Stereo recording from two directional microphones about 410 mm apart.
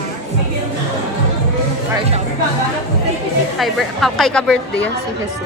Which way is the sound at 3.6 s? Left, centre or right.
Centre.